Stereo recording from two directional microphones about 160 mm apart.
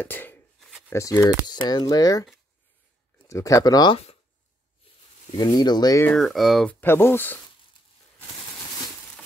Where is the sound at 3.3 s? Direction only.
20° left (ahead or behind).